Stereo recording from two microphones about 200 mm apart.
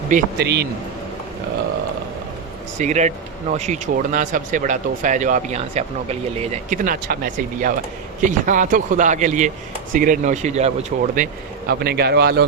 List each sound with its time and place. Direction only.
0.1 s a man's voice: 50° right (ahead or behind)
2.7 s speech: 35° right (ahead or behind)
11.7 s a man's voice: 50° right (ahead or behind)